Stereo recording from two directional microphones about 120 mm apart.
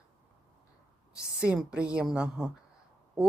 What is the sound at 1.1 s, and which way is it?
A woman's voice, 5° right (ahead or behind).